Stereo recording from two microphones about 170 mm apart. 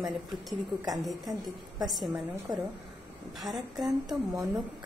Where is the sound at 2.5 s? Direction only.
20° right (ahead or behind).